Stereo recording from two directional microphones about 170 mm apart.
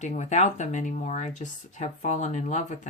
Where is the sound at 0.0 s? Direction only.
45° left (ahead or behind).